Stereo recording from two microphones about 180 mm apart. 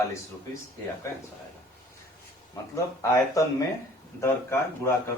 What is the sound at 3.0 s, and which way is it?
A man's voice, 15° left (ahead or behind).